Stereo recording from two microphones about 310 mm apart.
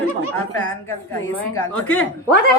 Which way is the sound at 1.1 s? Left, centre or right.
Centre.